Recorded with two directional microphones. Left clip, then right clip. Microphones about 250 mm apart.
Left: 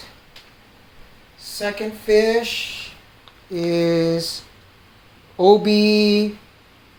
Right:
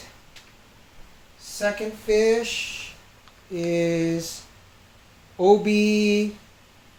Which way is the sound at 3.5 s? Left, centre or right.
Left.